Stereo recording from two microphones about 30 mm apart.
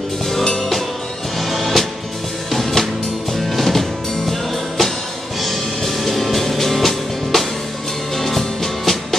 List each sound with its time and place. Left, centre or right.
1.4 s music: centre